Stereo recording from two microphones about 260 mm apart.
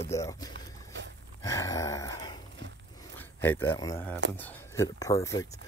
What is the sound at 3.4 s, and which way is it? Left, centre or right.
Speech, centre.